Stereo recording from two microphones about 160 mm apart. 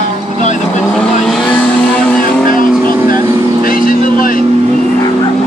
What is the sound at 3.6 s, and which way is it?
Vehicle, 60° left (ahead or behind).